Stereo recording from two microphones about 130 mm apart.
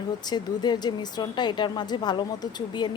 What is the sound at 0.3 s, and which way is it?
A woman's voice, 35° left (ahead or behind).